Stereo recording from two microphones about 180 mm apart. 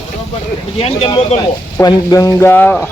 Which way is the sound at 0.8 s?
30° left (ahead or behind).